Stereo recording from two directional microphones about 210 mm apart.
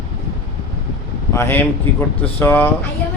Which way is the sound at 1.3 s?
10° left (ahead or behind).